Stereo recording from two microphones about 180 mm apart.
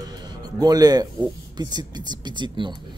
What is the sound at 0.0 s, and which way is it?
Speech, 20° right (ahead or behind).